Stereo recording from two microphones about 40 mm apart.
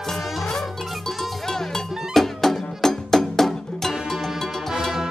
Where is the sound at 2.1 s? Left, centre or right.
Centre.